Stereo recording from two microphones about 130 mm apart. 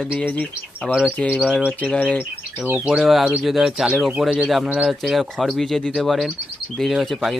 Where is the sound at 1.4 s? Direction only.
5° right (ahead or behind).